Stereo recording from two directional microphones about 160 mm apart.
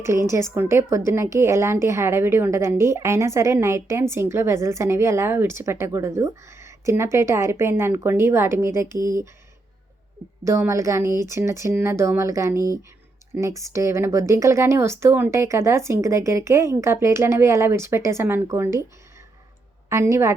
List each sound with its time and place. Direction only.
0.0 s a woman's voice: 15° right (ahead or behind)
10.4 s a woman's voice: 20° right (ahead or behind)
19.9 s a woman's voice: 20° right (ahead or behind)